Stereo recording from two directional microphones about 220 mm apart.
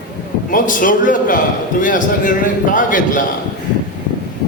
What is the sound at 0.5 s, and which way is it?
A man's voice, 35° left (ahead or behind).